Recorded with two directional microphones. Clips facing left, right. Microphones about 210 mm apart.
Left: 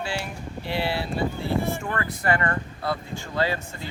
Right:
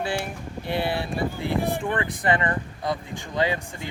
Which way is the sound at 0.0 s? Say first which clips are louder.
Right 3 dB; 55° right (ahead or behind).